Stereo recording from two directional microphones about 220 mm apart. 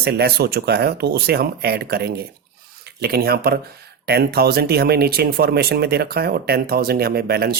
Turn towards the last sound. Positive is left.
turn(degrees=-45)  # may be behind; listen again after turning